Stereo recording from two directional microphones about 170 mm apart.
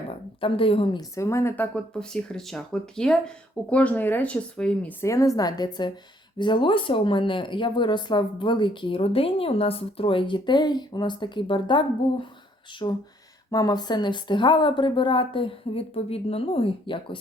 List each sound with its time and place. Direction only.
0.3 s speech: 30° left (ahead or behind)